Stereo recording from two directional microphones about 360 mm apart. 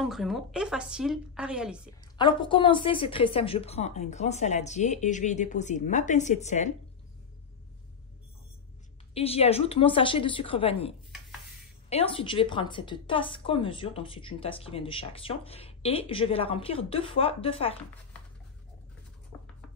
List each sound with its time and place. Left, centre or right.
0.0 s a woman's voice: centre
2.1 s speech: centre
9.1 s a woman's voice: centre